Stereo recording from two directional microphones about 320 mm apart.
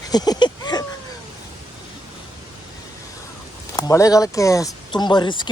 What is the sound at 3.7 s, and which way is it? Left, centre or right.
Speech, centre.